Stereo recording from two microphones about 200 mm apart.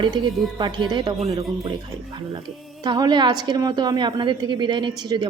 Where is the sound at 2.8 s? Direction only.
20° right (ahead or behind).